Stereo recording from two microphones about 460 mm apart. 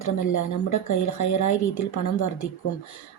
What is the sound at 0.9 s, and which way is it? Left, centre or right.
Speech, left.